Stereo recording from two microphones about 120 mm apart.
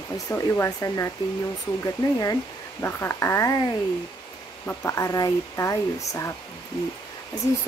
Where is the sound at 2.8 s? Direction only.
20° left (ahead or behind).